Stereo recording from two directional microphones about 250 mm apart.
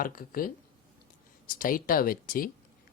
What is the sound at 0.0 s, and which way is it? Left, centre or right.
Speech, left.